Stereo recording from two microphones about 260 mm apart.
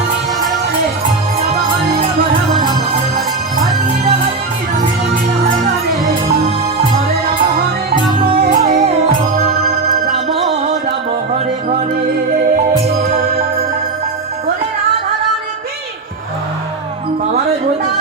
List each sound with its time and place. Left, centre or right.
8.4 s music: right